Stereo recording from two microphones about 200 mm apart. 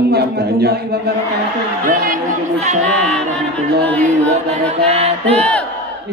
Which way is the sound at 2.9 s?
5° left (ahead or behind).